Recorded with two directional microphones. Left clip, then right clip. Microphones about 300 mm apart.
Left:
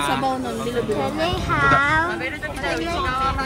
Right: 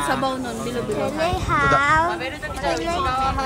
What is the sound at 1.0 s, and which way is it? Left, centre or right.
Speech, centre.